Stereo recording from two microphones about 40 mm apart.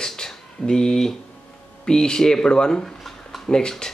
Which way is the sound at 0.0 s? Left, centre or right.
Centre.